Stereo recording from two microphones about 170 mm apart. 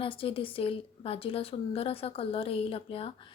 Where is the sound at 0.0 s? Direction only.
30° left (ahead or behind).